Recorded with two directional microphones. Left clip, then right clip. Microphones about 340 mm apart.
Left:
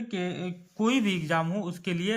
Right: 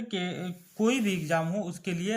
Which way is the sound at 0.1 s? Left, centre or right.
Centre.